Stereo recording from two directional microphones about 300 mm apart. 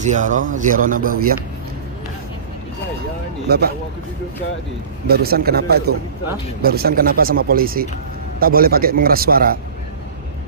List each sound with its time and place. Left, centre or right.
0.0 s speech: right
3.5 s a man's voice: right
5.0 s a man's voice: right